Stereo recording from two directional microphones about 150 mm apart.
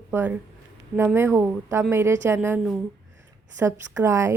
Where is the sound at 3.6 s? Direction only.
20° right (ahead or behind).